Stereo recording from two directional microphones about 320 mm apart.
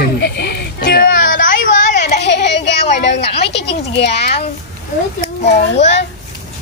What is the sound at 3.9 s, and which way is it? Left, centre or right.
Speech, left.